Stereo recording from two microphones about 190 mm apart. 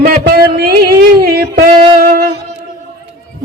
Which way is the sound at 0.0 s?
55° right (ahead or behind).